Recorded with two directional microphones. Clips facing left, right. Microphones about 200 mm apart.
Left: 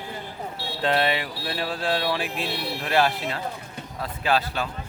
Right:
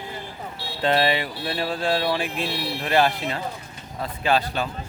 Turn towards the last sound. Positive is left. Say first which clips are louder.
# right 2 dB
turn(degrees=0)  # may be behind; listen again after turning